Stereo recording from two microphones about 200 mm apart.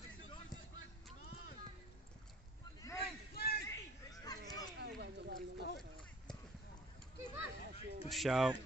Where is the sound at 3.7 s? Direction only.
20° left (ahead or behind).